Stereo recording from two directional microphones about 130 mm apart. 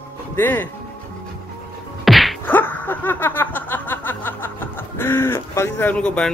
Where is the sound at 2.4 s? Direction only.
15° left (ahead or behind).